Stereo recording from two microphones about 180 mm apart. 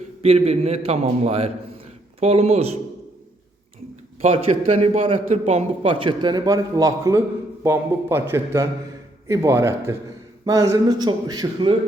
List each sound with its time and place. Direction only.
0.2 s a man's voice: 35° right (ahead or behind)
4.8 s a man's voice: 35° right (ahead or behind)